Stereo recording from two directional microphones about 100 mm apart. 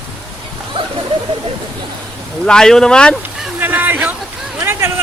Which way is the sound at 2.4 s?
5° left (ahead or behind).